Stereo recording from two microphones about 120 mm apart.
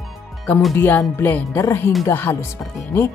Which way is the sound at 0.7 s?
15° left (ahead or behind).